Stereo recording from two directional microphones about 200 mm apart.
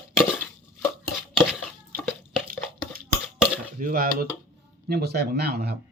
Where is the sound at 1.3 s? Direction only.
5° right (ahead or behind).